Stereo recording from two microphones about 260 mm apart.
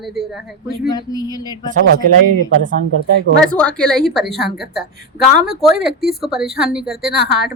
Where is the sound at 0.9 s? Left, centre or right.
Centre.